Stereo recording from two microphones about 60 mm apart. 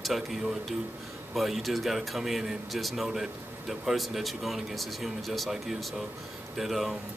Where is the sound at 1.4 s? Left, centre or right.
Centre.